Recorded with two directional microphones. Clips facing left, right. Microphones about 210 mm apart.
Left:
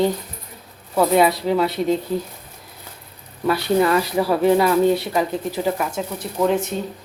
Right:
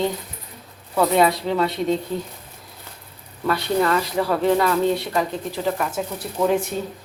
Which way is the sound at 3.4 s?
10° left (ahead or behind).